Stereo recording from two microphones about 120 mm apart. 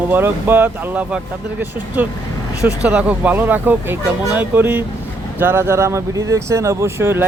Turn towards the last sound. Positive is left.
turn(degrees=-20)  # may be behind; listen again after turning